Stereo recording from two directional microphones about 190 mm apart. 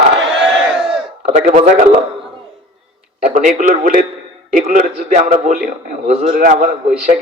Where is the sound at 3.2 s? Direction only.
40° right (ahead or behind).